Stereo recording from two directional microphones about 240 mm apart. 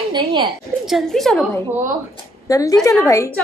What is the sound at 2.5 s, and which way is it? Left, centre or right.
Speech, centre.